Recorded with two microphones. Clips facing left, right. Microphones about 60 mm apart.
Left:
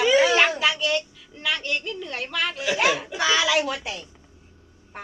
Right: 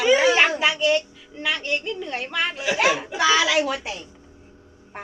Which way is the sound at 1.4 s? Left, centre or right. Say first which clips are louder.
Right 2 dB; centre.